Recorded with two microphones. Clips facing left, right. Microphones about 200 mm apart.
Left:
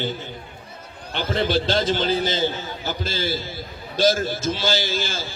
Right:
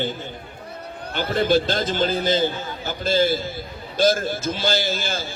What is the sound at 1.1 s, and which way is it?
A man's voice, 50° right (ahead or behind).